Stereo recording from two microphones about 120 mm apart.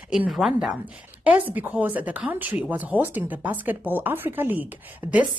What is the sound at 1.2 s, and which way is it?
A woman's voice, 15° right (ahead or behind).